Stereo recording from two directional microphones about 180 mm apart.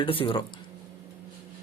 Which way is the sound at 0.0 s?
30° left (ahead or behind).